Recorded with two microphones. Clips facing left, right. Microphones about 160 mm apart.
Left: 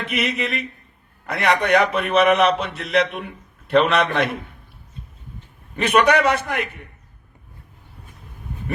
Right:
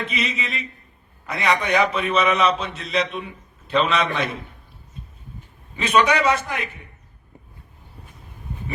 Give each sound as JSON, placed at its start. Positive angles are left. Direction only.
{"t": 0.1, "sound": "a man's voice", "side_deg": 60}
{"t": 5.7, "sound": "a man's voice", "side_deg": 60}